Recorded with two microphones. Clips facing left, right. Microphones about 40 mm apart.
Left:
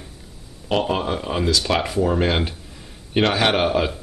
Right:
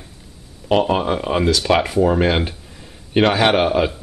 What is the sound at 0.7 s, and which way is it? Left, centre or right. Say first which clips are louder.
Speech: right 4 dB; centre.